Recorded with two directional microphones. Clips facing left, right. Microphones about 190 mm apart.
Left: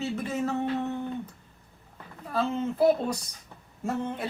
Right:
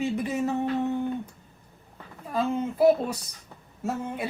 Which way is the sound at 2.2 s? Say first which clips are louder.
Right 1 dB; 10° right (ahead or behind).